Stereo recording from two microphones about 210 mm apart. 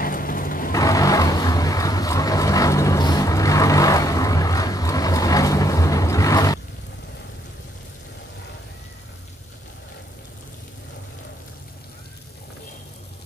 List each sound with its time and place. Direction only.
0.0 s vehicle: 40° left (ahead or behind)
0.7 s vehicle: 15° left (ahead or behind)